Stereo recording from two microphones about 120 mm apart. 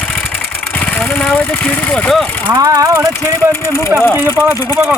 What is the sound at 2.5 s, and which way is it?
Speech, 30° right (ahead or behind).